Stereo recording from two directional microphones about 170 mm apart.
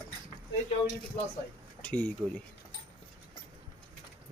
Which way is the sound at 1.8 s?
10° left (ahead or behind).